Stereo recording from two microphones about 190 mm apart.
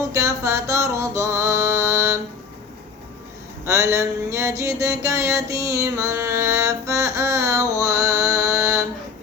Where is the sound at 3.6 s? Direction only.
15° right (ahead or behind).